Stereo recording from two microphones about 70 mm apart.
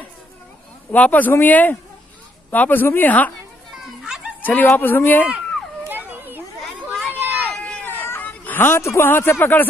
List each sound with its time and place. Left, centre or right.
0.9 s a woman's voice: left
4.0 s a sound: centre
4.4 s dog: left
4.6 s a woman's voice: left
5.9 s children playing: right
7.2 s a sound: right
7.5 s a sound: centre
7.8 s hubbub: left
8.3 s a man's voice: left